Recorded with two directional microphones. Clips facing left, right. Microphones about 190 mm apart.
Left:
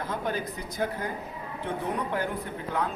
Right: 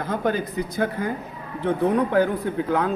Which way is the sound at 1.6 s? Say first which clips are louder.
Right 11 dB; 90° right.